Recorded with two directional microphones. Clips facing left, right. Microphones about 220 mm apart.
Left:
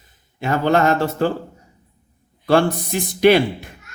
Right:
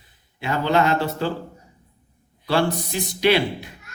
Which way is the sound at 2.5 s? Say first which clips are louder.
Left 5 dB; 50° left (ahead or behind).